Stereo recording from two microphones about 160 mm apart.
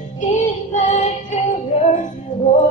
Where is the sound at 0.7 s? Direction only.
50° left (ahead or behind).